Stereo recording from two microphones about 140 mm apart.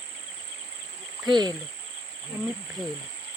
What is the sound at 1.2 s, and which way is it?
Speech, 30° right (ahead or behind).